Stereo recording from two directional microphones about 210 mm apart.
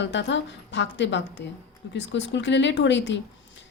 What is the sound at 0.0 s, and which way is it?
A woman's voice, 60° left (ahead or behind).